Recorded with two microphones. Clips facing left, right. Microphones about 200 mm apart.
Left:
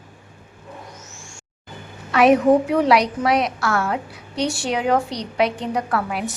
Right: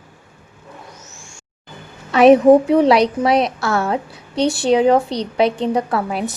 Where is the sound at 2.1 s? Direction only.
25° right (ahead or behind).